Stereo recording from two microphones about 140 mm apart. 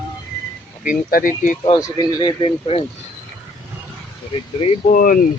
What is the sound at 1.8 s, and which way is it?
Speech, 25° left (ahead or behind).